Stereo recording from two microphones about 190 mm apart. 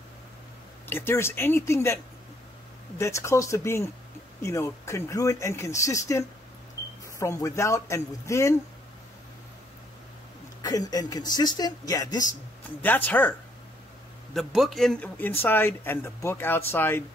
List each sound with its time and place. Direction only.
0.8 s speech: 10° left (ahead or behind)
3.0 s speech: 15° left (ahead or behind)
10.6 s speech: 20° left (ahead or behind)
12.8 s a man's voice: 10° left (ahead or behind)